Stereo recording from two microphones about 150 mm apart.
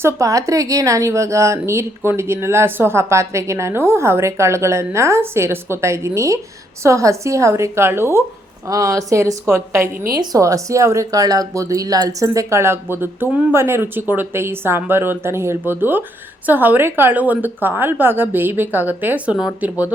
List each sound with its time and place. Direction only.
0.0 s speech: 20° right (ahead or behind)
9.9 s a woman's voice: 70° right (ahead or behind)
10.2 s speech: 20° right (ahead or behind)